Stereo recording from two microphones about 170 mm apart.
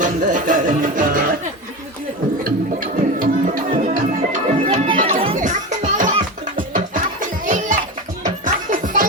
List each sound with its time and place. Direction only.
0.0 s music: 50° right (ahead or behind)
2.4 s music: 55° right (ahead or behind)
4.6 s music: 35° right (ahead or behind)
5.4 s music: 50° right (ahead or behind)